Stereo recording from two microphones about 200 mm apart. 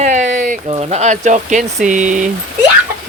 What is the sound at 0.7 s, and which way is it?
Speech, 30° right (ahead or behind).